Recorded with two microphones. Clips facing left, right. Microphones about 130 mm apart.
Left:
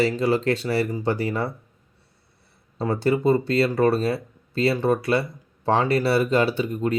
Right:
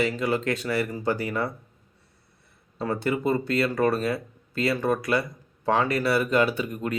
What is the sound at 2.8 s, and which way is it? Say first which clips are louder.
Speech: left 5 dB; 30° left (ahead or behind).